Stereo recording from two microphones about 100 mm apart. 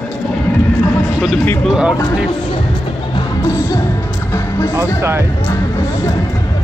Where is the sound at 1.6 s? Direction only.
5° right (ahead or behind).